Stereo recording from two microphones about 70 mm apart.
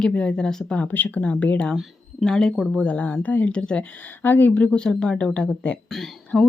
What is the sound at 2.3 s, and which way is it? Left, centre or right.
Speech, centre.